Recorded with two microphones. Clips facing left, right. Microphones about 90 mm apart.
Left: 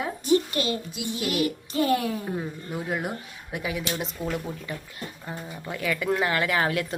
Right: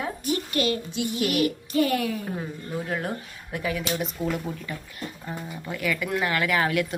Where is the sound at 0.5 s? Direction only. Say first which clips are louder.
Right 2 dB; 25° left (ahead or behind).